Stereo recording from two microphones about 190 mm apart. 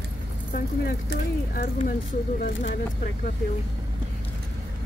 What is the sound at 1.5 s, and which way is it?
Speech, 50° left (ahead or behind).